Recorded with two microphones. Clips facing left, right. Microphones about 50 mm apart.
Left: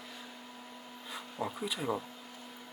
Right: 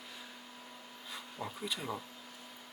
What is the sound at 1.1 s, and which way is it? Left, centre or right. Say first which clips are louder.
Speech: left 5 dB; centre.